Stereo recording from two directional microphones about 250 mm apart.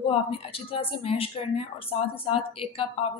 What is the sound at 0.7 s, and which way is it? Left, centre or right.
Speech, left.